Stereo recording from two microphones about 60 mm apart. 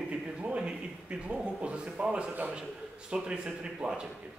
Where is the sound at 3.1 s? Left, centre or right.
Centre.